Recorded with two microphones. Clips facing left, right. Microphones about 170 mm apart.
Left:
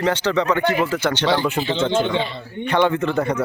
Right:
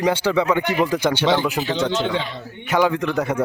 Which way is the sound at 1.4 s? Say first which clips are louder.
Left 1 dB; centre (ahead or behind).